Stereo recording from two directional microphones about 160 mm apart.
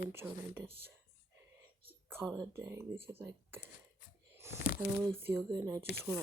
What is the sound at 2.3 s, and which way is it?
Speech, 20° right (ahead or behind).